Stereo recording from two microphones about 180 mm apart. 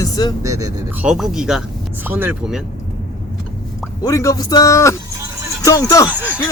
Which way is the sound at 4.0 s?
15° left (ahead or behind).